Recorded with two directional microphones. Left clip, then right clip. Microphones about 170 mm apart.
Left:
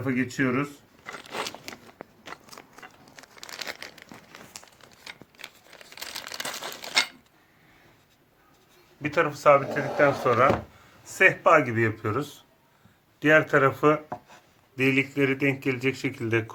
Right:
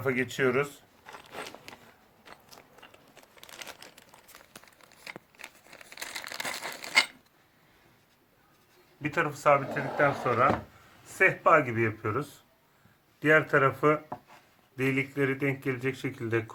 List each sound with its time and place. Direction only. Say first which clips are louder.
0.0 s speech: even; 50° right (ahead or behind)
1.0 s a sound: left 8 dB; 35° left (ahead or behind)
2.8 s crumpling: left 6 dB; 35° left (ahead or behind)
5.0 s crumpling: left 1 dB; 5° left (ahead or behind)
9.0 s speech: left 5 dB; centre (ahead or behind)